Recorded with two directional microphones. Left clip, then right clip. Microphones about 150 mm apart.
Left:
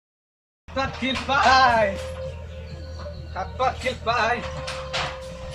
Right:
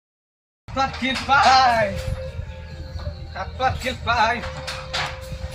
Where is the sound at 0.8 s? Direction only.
10° right (ahead or behind).